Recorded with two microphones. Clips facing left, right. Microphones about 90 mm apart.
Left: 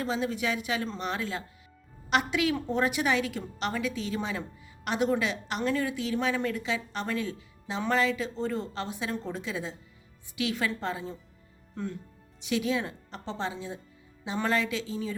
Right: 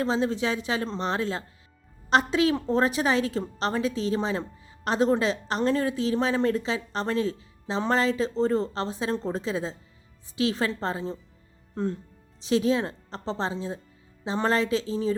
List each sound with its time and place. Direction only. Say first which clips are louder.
0.0 s a woman's voice: right 4 dB; 30° right (ahead or behind)